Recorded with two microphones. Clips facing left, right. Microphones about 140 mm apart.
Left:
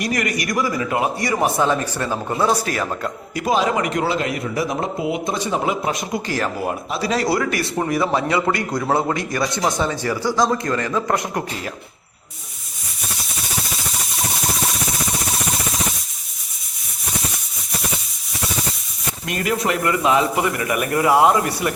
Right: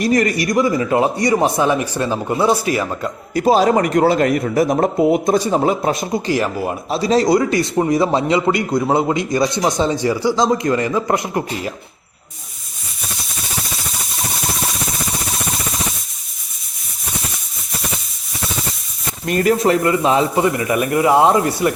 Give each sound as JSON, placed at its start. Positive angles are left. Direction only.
{"t": 0.0, "sound": "a man's voice", "side_deg": -30}
{"t": 3.3, "sound": "a man's voice", "side_deg": -35}
{"t": 19.3, "sound": "speech", "side_deg": -40}